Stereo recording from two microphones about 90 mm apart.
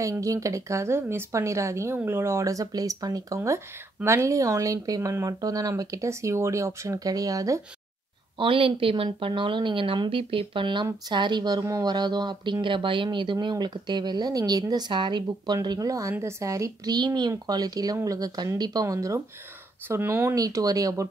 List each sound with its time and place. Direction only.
0.0 s speech: 35° right (ahead or behind)
3.4 s speech: 30° right (ahead or behind)
8.4 s a woman's voice: 75° right (ahead or behind); by 12.5 s 55° right (ahead or behind)
12.6 s speech: 65° right (ahead or behind); by 16.9 s 35° right (ahead or behind)
16.9 s speech: 50° right (ahead or behind); by 20.3 s 25° right (ahead or behind)
20.3 s speech: 40° right (ahead or behind)